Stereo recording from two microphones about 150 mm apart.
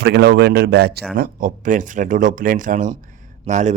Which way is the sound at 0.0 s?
90° right.